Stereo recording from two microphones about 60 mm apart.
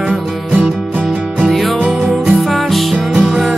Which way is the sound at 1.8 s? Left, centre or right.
Centre.